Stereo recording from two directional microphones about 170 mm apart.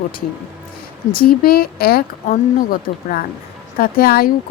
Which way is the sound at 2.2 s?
50° left (ahead or behind).